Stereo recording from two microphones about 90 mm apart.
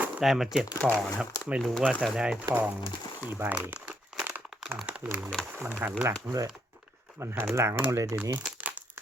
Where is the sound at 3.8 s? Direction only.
10° right (ahead or behind).